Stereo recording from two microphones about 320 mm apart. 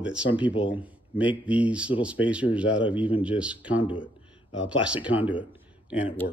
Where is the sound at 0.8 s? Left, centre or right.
Centre.